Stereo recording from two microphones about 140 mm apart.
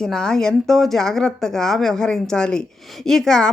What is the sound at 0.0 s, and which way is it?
Speech, 5° left (ahead or behind).